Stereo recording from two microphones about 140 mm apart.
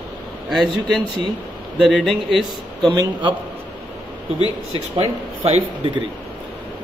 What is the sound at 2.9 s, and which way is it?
Speech, 30° right (ahead or behind).